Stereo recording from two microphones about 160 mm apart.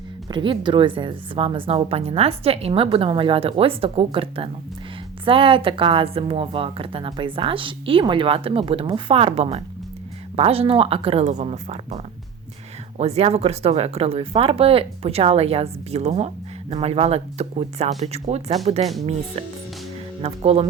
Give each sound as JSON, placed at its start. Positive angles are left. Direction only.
{"t": 0.3, "sound": "speech", "side_deg": -30}
{"t": 20.2, "sound": "speech", "side_deg": -40}